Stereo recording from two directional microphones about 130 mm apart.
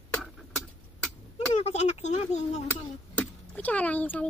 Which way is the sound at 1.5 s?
55° left (ahead or behind).